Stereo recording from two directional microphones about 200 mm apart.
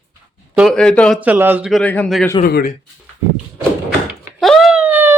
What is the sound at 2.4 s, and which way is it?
Speech, 45° left (ahead or behind).